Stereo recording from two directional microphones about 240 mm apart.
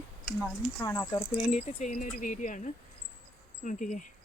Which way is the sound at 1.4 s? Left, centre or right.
Left.